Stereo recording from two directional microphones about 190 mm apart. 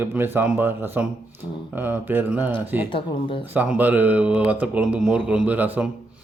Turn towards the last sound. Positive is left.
turn(degrees=-10)  # may be behind; listen again after turning